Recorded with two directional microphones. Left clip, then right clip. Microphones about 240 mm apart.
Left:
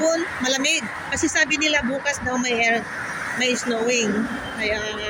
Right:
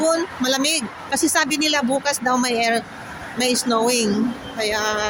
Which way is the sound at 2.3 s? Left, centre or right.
Right.